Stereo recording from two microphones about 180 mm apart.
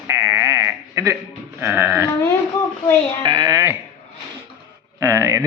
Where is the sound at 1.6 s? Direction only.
15° right (ahead or behind).